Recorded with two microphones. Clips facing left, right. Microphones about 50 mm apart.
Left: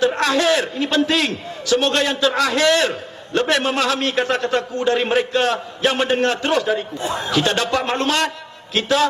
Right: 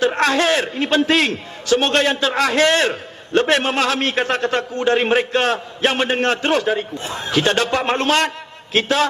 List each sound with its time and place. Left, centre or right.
0.0 s a man's voice: right